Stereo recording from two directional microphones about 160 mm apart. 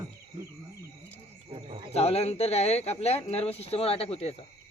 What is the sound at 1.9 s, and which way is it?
Speech, 40° left (ahead or behind).